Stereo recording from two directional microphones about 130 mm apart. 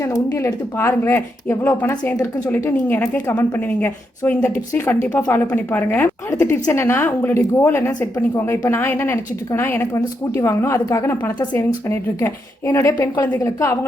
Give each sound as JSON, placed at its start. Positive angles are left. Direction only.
{"t": 0.0, "sound": "speech", "side_deg": 20}